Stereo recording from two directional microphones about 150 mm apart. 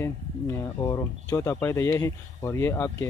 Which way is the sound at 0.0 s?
20° left (ahead or behind).